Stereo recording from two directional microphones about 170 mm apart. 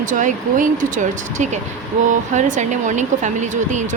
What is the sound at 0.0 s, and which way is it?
Speech, 50° right (ahead or behind).